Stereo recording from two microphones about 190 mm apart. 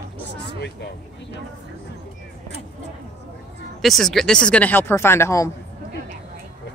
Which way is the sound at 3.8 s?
Centre (ahead or behind).